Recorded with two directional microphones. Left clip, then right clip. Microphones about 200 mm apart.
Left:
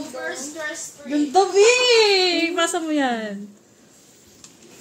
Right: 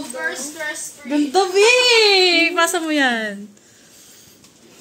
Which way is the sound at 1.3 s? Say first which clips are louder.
Right 1 dB; 35° right (ahead or behind).